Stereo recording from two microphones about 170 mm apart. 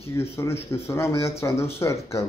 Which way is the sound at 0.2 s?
15° left (ahead or behind).